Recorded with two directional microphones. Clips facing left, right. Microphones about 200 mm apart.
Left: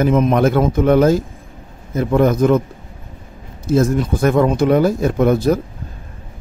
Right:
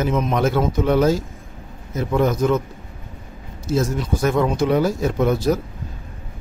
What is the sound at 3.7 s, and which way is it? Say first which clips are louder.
Speech: left 6 dB; 55° left (ahead or behind).